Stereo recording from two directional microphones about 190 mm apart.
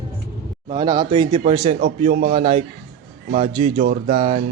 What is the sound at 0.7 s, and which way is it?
A man's voice, 20° right (ahead or behind).